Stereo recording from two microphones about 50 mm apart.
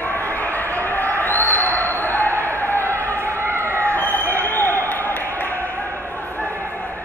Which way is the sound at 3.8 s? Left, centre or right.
Left.